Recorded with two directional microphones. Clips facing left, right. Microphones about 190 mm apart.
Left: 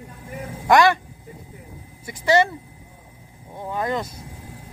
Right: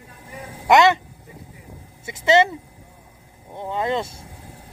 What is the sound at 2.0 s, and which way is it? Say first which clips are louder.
Speech: right 2 dB; 25° right (ahead or behind).